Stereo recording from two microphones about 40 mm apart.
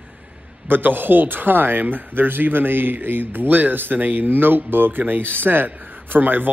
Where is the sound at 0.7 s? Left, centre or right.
Right.